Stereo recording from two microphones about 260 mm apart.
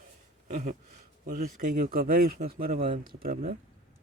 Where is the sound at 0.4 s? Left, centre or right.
Right.